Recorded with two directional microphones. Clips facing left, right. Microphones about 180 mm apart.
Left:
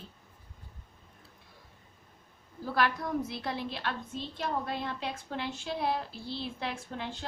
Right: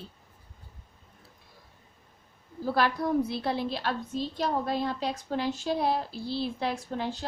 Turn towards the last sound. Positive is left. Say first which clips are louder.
# right 6 dB
turn(degrees=-35)  # may be behind; listen again after turning